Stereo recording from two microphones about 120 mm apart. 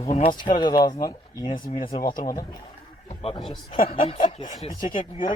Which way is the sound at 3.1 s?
55° left (ahead or behind).